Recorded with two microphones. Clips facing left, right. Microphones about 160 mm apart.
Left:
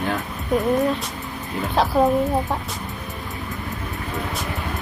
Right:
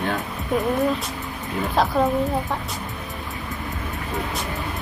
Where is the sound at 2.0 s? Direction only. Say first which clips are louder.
Left 3 dB; 20° left (ahead or behind).